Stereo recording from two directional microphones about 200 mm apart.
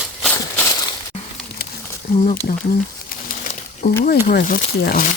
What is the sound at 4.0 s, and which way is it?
Speech, 50° left (ahead or behind).